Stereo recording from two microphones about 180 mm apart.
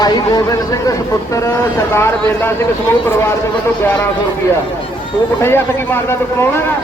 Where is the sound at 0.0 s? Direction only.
20° left (ahead or behind).